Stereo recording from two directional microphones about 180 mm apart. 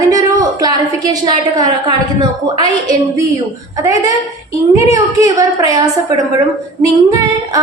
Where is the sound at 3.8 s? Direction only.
20° right (ahead or behind).